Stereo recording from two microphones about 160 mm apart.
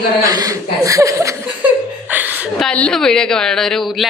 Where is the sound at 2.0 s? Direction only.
10° right (ahead or behind).